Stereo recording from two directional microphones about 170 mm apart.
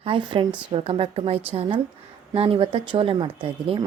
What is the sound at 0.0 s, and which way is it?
A woman's voice, 30° right (ahead or behind).